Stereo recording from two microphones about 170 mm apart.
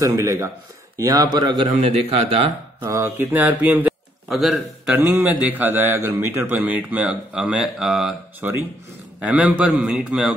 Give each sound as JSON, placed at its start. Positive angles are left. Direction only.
{"t": 0.0, "sound": "a man's voice", "side_deg": -20}
{"t": 1.8, "sound": "a man's voice", "side_deg": -35}
{"t": 2.8, "sound": "a man's voice", "side_deg": -15}